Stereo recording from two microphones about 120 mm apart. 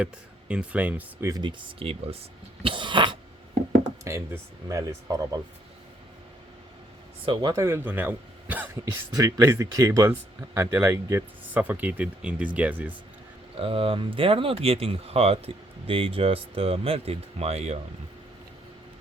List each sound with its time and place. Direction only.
0.0 s speech: 10° right (ahead or behind)
1.4 s speech: 40° right (ahead or behind)
2.6 s cough: 40° right (ahead or behind)
4.0 s a man's voice: 25° right (ahead or behind)
7.3 s speech: 40° right (ahead or behind)
7.5 s a man's voice: 20° right (ahead or behind)
11.5 s speech: 15° right (ahead or behind)
13.6 s speech: 50° right (ahead or behind)